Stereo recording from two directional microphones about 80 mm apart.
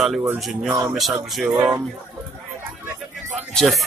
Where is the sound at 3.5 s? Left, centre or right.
Centre.